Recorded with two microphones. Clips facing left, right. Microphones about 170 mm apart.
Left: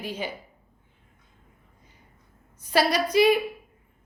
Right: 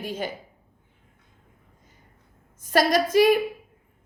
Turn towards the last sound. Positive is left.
turn(degrees=-45)  # may be behind; listen again after turning